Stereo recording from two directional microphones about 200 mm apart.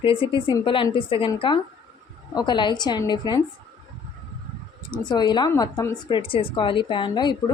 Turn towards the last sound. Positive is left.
turn(degrees=20)  # may be behind; listen again after turning